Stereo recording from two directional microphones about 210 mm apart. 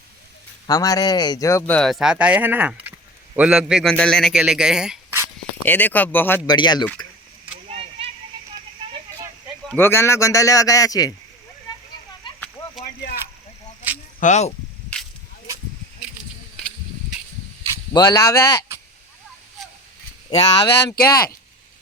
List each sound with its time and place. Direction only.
0.7 s a man's voice: 15° left (ahead or behind); by 5.3 s 5° right (ahead or behind)
5.6 s speech: 10° left (ahead or behind)
7.7 s a sound: 30° right (ahead or behind)
9.6 s speech: 10° left (ahead or behind)
14.2 s speech: 35° left (ahead or behind)
17.9 s speech: 15° left (ahead or behind)
20.7 s speech: 55° left (ahead or behind)